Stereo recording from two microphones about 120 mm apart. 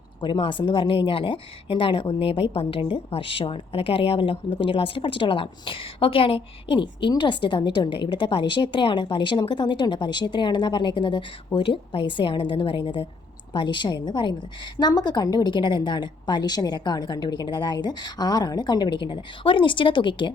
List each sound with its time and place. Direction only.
0.2 s a woman's voice: 40° left (ahead or behind)